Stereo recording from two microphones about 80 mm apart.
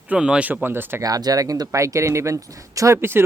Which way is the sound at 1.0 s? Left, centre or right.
Right.